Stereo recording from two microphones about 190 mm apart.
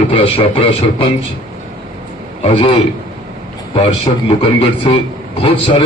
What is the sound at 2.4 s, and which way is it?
Speech, 30° left (ahead or behind).